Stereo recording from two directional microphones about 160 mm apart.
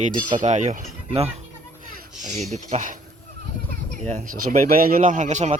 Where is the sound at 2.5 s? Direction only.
50° right (ahead or behind).